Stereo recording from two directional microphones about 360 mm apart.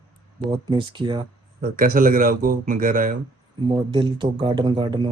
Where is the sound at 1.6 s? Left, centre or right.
Right.